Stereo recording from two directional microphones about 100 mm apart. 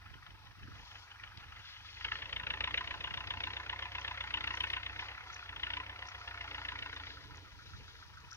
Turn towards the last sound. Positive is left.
turn(degrees=25)  # may be behind; listen again after turning